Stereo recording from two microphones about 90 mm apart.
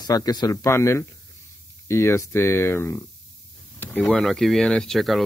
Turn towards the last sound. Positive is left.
turn(degrees=0)  # may be behind; listen again after turning